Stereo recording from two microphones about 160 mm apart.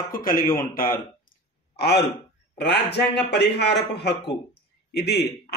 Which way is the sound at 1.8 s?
90° left.